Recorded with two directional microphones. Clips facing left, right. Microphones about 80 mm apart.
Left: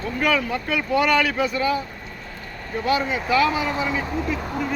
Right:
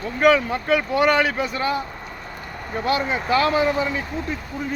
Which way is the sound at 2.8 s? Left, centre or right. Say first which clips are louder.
Even; right.